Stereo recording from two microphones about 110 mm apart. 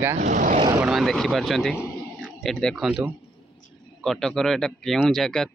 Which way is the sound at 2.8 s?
5° right (ahead or behind).